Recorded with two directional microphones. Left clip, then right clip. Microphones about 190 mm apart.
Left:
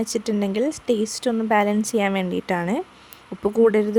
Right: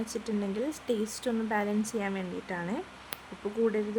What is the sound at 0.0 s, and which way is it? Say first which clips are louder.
A woman's voice: left 10 dB; 40° left (ahead or behind).